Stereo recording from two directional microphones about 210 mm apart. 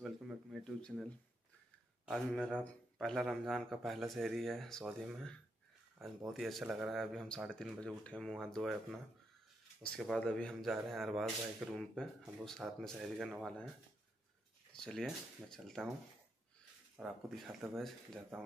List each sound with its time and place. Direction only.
0.0 s a sound: centre (ahead or behind)
2.0 s speech: centre (ahead or behind)
9.9 s speech: 5° left (ahead or behind)
14.7 s speech: 5° left (ahead or behind)
16.9 s speech: centre (ahead or behind)